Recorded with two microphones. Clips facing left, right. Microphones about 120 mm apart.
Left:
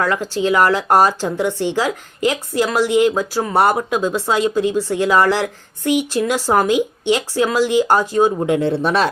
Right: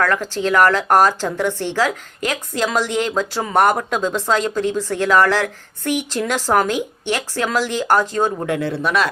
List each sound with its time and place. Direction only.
0.0 s speech: 15° left (ahead or behind)
8.5 s speech: 25° left (ahead or behind)